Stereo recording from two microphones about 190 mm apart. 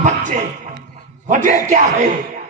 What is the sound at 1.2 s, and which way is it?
Music, 40° right (ahead or behind).